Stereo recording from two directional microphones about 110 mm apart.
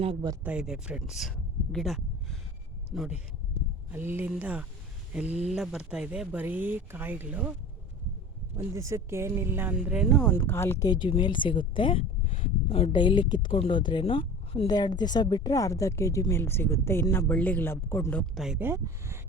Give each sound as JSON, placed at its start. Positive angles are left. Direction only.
{"t": 0.4, "sound": "speech", "side_deg": -10}
{"t": 3.9, "sound": "speech", "side_deg": -20}
{"t": 8.5, "sound": "speech", "side_deg": -25}
{"t": 10.1, "sound": "speech", "side_deg": 10}
{"t": 10.3, "sound": "a woman's voice", "side_deg": 20}
{"t": 10.8, "sound": "a woman's voice", "side_deg": 45}
{"t": 14.7, "sound": "a woman's voice", "side_deg": 40}
{"t": 18.3, "sound": "speech", "side_deg": -5}
{"t": 18.6, "sound": "speech", "side_deg": -20}